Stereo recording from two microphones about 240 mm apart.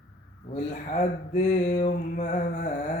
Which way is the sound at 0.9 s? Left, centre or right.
Left.